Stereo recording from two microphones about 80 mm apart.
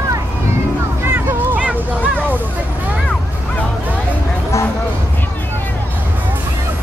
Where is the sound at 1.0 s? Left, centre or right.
Right.